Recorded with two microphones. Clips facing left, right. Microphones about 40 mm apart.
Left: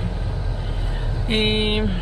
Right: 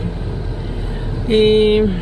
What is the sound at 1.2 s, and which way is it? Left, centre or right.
Vehicle, centre.